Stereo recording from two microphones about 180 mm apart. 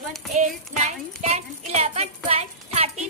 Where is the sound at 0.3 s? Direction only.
40° right (ahead or behind).